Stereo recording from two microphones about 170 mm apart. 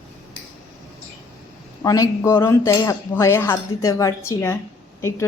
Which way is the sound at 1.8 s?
20° left (ahead or behind).